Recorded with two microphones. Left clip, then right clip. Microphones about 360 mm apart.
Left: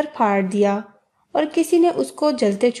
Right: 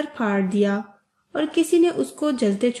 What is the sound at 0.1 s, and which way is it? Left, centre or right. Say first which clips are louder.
Speech: left 5 dB; centre.